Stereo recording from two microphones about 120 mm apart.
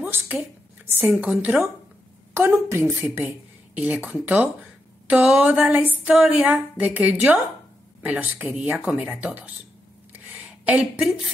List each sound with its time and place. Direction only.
0.0 s speech: 15° right (ahead or behind)
1.0 s speech: 5° right (ahead or behind)
2.3 s a woman's voice: 20° right (ahead or behind)
10.6 s a sound: 10° right (ahead or behind)